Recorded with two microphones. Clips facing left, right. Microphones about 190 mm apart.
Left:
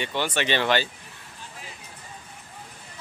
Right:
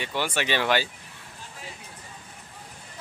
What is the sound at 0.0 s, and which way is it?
Speech, 10° right (ahead or behind).